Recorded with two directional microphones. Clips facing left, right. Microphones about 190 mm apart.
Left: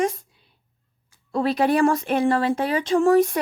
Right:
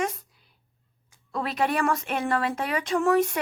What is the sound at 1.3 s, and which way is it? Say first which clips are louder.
Speech: left 6 dB; 35° left (ahead or behind).